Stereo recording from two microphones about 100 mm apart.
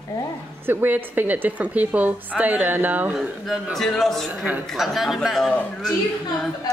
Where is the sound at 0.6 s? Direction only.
20° right (ahead or behind).